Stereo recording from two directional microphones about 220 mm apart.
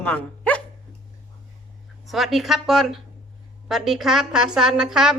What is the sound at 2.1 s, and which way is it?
A woman's voice, centre (ahead or behind).